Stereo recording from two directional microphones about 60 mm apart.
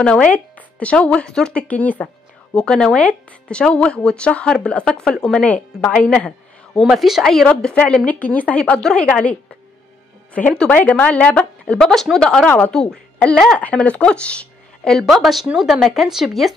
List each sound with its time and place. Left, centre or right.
0.0 s speech: left
2.5 s speech: centre
5.4 s speech: left
6.7 s speech: centre
7.8 s speech: centre
8.1 s speech: left
11.8 s speech: centre
12.4 s speech: left
12.7 s a woman's voice: centre
15.0 s speech: centre